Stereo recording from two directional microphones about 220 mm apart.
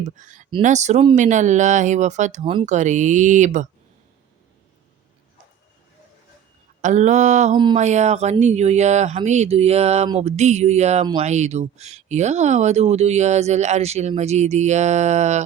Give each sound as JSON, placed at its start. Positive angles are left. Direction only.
{"t": 0.0, "sound": "speech", "side_deg": -35}
{"t": 6.8, "sound": "speech", "side_deg": -35}
{"t": 7.5, "sound": "a sound", "side_deg": -20}
{"t": 7.8, "sound": "speech", "side_deg": -30}